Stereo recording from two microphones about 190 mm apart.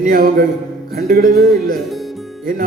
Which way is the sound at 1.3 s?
Centre (ahead or behind).